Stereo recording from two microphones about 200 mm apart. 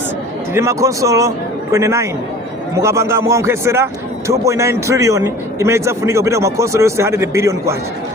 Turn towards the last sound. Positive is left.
turn(degrees=-15)  # may be behind; listen again after turning